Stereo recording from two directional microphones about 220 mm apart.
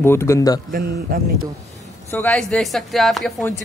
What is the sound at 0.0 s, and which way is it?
Speech, 10° left (ahead or behind).